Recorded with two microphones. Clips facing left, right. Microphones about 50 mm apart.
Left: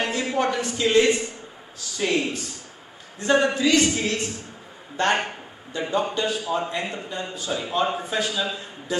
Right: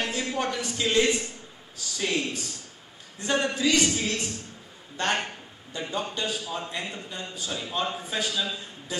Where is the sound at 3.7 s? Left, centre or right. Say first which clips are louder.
Left 4 dB; centre.